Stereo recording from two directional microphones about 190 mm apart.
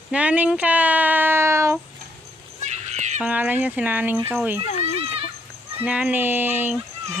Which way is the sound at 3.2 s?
10° right (ahead or behind).